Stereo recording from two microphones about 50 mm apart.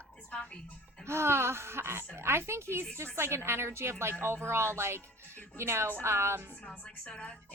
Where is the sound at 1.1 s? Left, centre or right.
Right.